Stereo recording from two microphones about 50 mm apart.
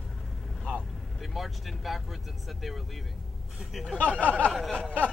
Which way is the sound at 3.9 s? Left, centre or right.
Left.